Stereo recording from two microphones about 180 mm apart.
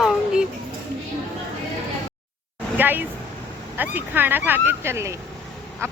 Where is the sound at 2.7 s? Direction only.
10° right (ahead or behind).